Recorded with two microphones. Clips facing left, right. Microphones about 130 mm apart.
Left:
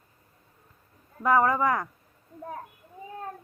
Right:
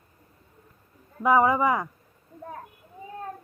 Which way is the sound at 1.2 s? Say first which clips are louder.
Right 2 dB; 10° right (ahead or behind).